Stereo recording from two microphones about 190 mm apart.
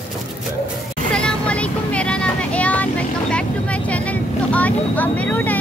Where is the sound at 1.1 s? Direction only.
5° left (ahead or behind).